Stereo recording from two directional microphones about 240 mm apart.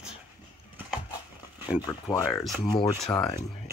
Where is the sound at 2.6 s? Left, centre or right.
Left.